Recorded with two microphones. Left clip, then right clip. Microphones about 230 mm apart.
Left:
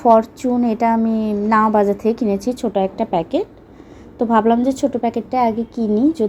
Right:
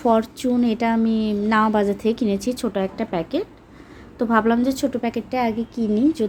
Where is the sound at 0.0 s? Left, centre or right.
Centre.